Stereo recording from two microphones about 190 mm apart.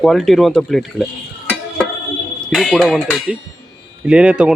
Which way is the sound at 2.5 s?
Centre (ahead or behind).